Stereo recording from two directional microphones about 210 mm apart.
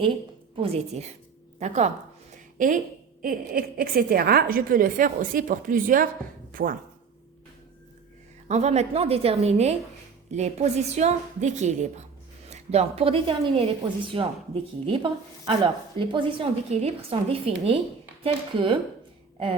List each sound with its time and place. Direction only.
0.5 s a woman's voice: 30° right (ahead or behind)
3.2 s a woman's voice: 45° right (ahead or behind)
8.4 s a woman's voice: 30° right (ahead or behind)